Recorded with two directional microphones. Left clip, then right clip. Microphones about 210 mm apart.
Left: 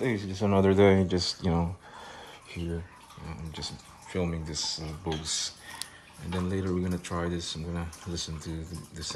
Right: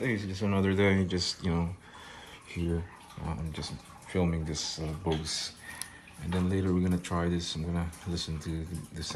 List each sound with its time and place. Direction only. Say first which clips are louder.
0.0 s speech: left 3 dB; 25° left (ahead or behind)
3.3 s speech: even; 10° left (ahead or behind)